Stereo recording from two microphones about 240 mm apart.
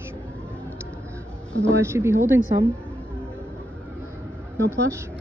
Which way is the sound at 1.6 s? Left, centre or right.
Centre.